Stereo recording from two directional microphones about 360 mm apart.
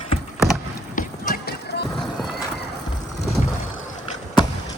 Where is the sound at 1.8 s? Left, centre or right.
Centre.